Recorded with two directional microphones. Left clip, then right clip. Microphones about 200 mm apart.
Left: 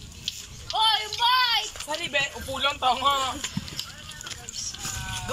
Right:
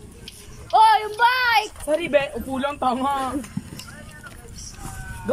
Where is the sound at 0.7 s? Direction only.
60° right (ahead or behind).